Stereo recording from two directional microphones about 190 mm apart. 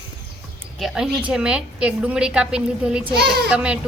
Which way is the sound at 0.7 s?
Centre (ahead or behind).